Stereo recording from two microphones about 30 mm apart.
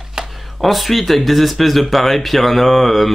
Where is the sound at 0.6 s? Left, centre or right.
Centre.